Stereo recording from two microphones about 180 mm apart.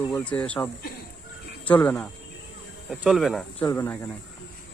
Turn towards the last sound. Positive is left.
turn(degrees=15)  # may be behind; listen again after turning